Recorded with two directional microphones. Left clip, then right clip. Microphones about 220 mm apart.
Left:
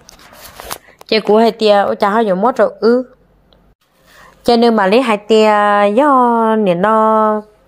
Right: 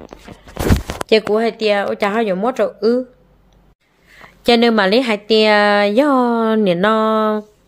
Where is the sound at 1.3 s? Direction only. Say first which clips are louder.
Left 6 dB; 20° left (ahead or behind).